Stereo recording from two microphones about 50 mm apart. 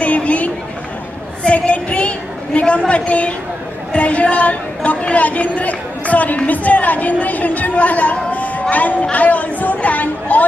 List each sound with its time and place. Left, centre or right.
0.0 s chatter: left
1.5 s a sound: left
2.9 s a man's voice: left